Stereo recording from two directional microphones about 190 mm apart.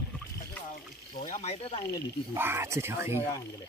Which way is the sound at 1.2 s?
35° left (ahead or behind).